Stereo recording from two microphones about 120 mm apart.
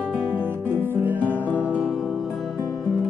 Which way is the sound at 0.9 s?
15° right (ahead or behind).